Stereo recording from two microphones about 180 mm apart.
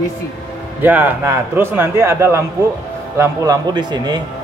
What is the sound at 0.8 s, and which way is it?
A man's voice, 10° right (ahead or behind).